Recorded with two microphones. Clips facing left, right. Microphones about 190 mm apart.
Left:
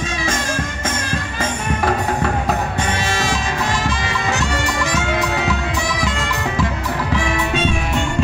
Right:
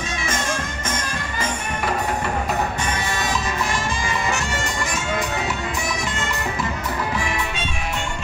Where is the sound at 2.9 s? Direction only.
90° left.